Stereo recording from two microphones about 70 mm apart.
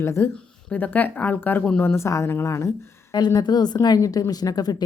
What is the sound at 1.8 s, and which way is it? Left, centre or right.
Speech, left.